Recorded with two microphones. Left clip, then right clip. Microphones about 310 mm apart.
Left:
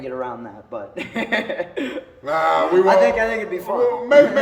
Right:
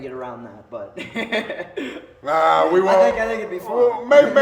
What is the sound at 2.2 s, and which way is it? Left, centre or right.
Speech, centre.